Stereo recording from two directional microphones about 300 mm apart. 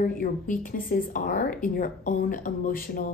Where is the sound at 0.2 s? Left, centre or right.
Left.